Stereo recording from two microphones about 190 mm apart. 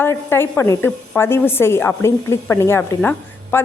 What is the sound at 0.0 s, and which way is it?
A woman's voice, 10° left (ahead or behind).